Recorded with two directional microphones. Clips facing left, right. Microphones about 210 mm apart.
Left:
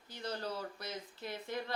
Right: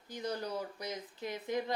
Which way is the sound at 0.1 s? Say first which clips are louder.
Right 3 dB; 15° right (ahead or behind).